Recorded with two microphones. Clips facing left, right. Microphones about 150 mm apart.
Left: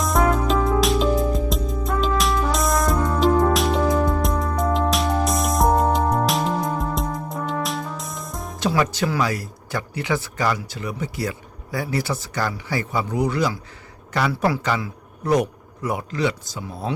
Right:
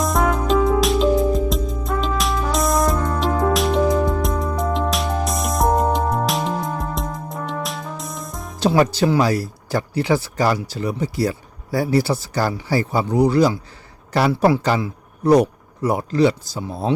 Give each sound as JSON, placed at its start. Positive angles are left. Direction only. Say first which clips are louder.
{"t": 0.0, "sound": "music", "louder": "even", "side_deg": 0}
{"t": 8.5, "sound": "a man's voice", "louder": "right 5 dB", "side_deg": -35}